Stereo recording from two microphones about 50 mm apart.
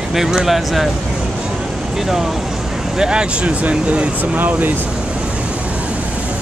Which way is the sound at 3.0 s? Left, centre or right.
Centre.